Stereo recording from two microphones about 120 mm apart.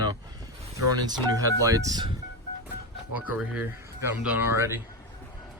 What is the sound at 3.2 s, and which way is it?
Speech, 10° right (ahead or behind).